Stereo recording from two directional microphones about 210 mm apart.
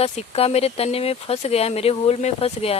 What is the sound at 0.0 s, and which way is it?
Speech, 30° left (ahead or behind).